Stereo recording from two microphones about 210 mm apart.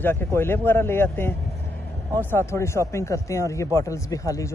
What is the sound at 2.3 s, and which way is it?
Speech, 10° left (ahead or behind).